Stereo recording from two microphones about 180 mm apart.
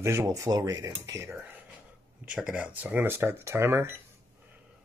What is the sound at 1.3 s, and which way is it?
Speech, 5° right (ahead or behind).